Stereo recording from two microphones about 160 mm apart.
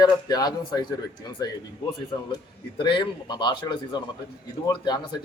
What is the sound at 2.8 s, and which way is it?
Speech, 30° left (ahead or behind).